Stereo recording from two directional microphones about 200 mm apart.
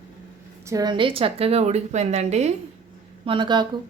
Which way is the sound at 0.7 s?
20° right (ahead or behind).